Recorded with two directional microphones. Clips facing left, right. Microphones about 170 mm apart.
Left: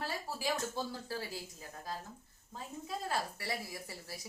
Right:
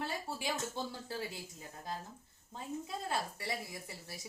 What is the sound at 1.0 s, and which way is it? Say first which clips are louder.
Speech: even; 20° right (ahead or behind).